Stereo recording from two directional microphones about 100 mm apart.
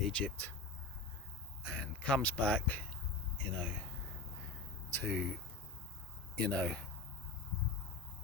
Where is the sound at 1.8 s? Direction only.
15° left (ahead or behind).